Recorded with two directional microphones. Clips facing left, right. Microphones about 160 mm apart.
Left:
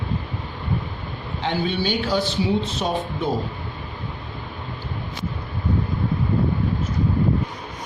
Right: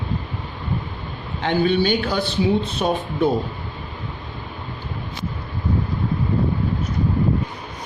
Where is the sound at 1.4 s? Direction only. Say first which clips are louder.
Right 5 dB; 60° right (ahead or behind).